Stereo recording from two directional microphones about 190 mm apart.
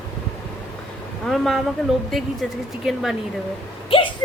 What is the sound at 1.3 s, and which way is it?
Speech, centre (ahead or behind).